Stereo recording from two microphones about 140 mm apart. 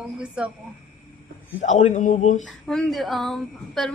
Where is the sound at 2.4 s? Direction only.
Centre (ahead or behind).